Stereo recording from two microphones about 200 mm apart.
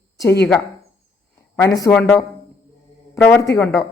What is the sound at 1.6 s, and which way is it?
Speech, 15° left (ahead or behind).